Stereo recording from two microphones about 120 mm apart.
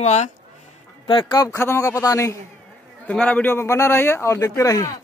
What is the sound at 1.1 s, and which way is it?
Speech, 40° left (ahead or behind).